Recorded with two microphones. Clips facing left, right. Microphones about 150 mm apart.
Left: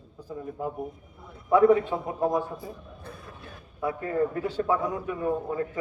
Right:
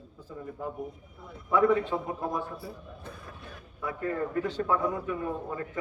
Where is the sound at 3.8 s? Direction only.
25° left (ahead or behind).